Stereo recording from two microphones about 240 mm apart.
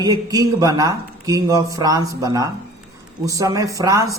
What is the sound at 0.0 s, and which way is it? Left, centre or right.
Speech, centre.